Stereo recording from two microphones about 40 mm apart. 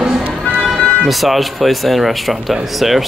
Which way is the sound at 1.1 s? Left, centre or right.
Centre.